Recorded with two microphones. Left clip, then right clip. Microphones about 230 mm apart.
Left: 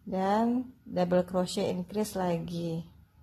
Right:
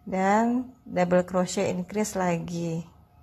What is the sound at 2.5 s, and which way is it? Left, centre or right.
Speech, right.